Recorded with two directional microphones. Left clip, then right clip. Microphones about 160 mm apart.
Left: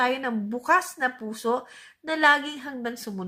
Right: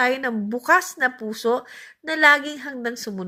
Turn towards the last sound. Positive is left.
turn(degrees=-20)  # may be behind; listen again after turning